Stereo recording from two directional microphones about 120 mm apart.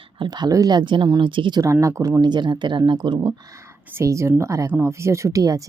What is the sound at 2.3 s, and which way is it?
Speech, 40° right (ahead or behind).